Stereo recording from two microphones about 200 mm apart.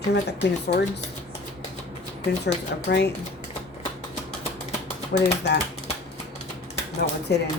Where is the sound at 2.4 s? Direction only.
55° left (ahead or behind).